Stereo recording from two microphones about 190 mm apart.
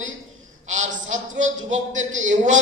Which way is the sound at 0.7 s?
40° right (ahead or behind).